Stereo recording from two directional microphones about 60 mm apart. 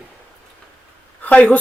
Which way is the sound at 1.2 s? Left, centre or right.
Left.